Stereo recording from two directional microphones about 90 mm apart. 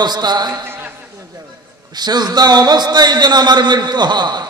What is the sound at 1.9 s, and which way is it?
A man's voice, 50° right (ahead or behind).